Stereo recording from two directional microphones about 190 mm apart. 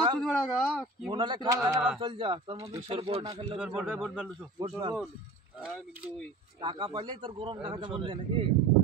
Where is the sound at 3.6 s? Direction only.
5° right (ahead or behind).